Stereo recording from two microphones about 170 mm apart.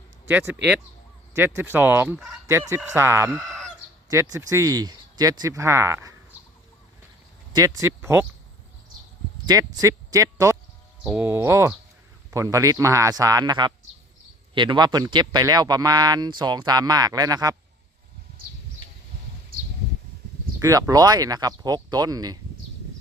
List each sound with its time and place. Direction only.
0.3 s fowl: 10° right (ahead or behind)
3.3 s fowl: 5° left (ahead or behind)
4.1 s speech: 20° right (ahead or behind)
7.5 s fowl: 20° right (ahead or behind)
9.5 s speech: 20° right (ahead or behind)
11.0 s fowl: 10° right (ahead or behind)
12.3 s speech: 20° right (ahead or behind)
20.6 s speech: 20° right (ahead or behind)